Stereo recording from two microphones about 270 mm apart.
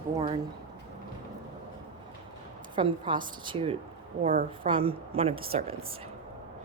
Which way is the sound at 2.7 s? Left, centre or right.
Centre.